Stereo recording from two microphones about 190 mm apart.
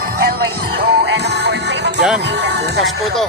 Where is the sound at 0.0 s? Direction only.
50° right (ahead or behind).